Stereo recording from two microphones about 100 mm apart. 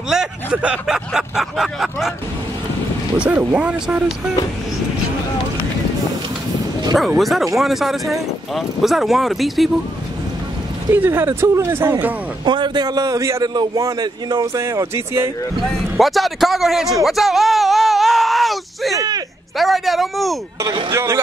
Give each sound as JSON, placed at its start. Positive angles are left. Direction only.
{"t": 0.1, "sound": "speech", "side_deg": -10}
{"t": 3.2, "sound": "speech", "side_deg": -10}
{"t": 7.2, "sound": "speech", "side_deg": 0}
{"t": 10.9, "sound": "speech", "side_deg": -25}
{"t": 12.4, "sound": "a man's voice", "side_deg": -50}
{"t": 15.6, "sound": "speech", "side_deg": 0}
{"t": 18.9, "sound": "speech", "side_deg": -40}
{"t": 19.5, "sound": "speech", "side_deg": 0}
{"t": 20.9, "sound": "speech", "side_deg": -30}